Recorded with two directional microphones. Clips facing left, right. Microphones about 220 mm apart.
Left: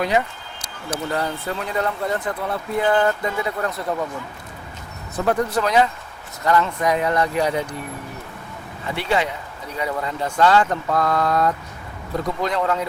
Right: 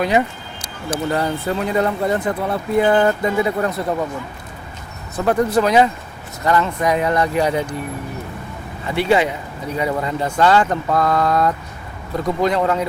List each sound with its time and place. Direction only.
0.0 s speech: 10° right (ahead or behind)
3.8 s speech: 25° right (ahead or behind)
5.2 s speech: 15° right (ahead or behind)
8.8 s speech: 10° right (ahead or behind)